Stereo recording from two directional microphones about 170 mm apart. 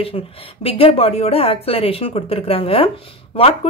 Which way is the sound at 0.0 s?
35° left (ahead or behind).